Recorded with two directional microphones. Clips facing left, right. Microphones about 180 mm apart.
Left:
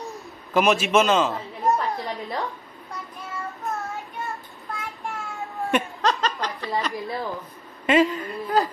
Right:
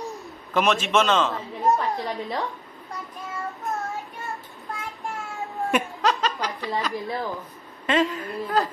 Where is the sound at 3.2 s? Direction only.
15° right (ahead or behind).